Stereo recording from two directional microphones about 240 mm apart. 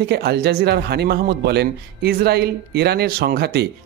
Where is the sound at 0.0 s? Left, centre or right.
Right.